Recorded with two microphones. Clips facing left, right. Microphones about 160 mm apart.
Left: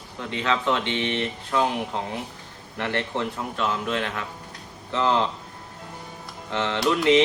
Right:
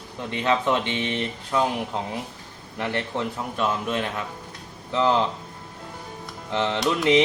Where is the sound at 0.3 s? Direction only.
15° right (ahead or behind).